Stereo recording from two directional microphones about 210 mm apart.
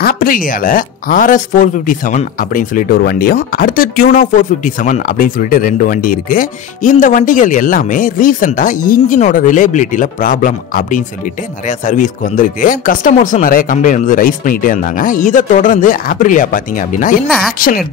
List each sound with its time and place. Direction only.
0.0 s speech: 45° left (ahead or behind)